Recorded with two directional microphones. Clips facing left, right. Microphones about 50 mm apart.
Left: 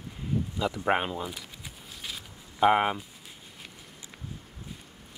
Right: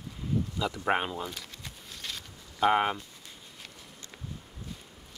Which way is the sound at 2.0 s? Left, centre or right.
Centre.